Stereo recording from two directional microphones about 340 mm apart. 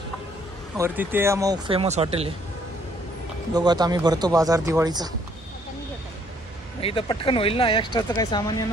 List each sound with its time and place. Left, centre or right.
0.7 s speech: centre
3.5 s speech: centre
6.8 s speech: centre